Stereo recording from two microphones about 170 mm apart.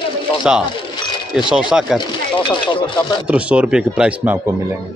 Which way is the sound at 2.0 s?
25° left (ahead or behind).